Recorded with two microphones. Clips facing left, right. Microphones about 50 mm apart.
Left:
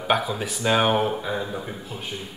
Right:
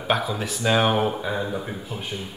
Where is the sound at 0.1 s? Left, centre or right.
Centre.